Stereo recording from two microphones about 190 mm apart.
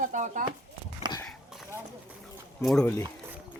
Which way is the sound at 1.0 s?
20° right (ahead or behind).